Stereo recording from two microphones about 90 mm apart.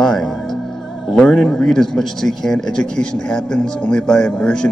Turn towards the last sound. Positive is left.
turn(degrees=10)  # may be behind; listen again after turning